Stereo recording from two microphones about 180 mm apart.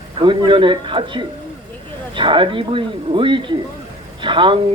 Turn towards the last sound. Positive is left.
turn(degrees=-30)  # may be behind; listen again after turning